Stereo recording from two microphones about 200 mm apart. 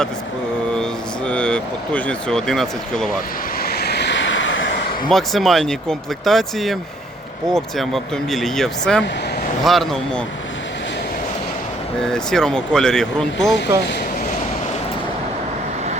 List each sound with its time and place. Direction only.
1.3 s speech: 5° left (ahead or behind)
3.6 s vehicle: 50° left (ahead or behind); by 4.7 s 70° left (ahead or behind)
5.0 s speech: centre (ahead or behind)
12.0 s speech: 5° left (ahead or behind)